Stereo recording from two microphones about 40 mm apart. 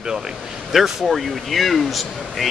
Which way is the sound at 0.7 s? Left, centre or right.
Centre.